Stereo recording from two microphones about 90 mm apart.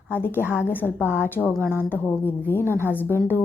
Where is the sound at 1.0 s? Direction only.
20° right (ahead or behind).